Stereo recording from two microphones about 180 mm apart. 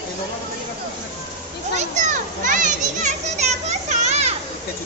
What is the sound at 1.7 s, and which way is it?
A child's voice, 45° right (ahead or behind).